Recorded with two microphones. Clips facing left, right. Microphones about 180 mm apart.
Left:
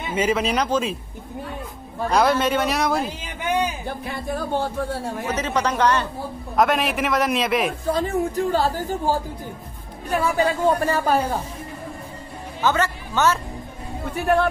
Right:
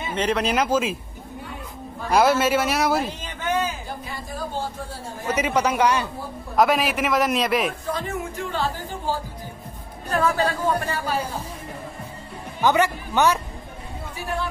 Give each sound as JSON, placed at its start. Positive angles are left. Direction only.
{"t": 0.1, "sound": "a man's voice", "side_deg": 5}
{"t": 2.0, "sound": "a man's voice", "side_deg": -5}
{"t": 3.3, "sound": "a sound", "side_deg": 15}
{"t": 4.0, "sound": "speech", "side_deg": 60}
{"t": 5.3, "sound": "a man's voice", "side_deg": -10}
{"t": 7.8, "sound": "speech", "side_deg": 35}
{"t": 10.1, "sound": "a man's voice", "side_deg": 10}
{"t": 11.1, "sound": "speech", "side_deg": 55}
{"t": 12.6, "sound": "speech", "side_deg": -15}
{"t": 14.1, "sound": "speech", "side_deg": 60}